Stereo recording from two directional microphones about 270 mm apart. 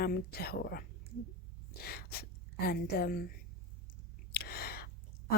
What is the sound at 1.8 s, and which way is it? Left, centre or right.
A woman's voice, left.